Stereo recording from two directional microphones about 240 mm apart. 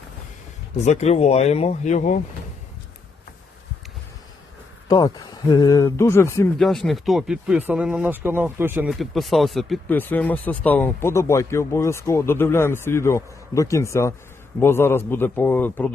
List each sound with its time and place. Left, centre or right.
0.9 s speech: left
4.9 s speech: centre
6.6 s speech: centre